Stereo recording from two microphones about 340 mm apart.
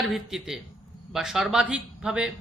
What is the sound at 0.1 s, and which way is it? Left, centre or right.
A man's voice, centre.